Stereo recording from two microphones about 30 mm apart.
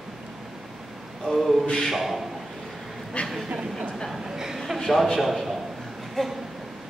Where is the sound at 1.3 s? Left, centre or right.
Centre.